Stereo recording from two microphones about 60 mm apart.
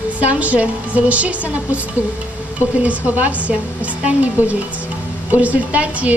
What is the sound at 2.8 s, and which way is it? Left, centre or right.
A woman's voice, right.